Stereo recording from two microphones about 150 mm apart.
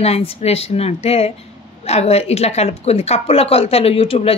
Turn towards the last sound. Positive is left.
turn(degrees=40)  # may be behind; listen again after turning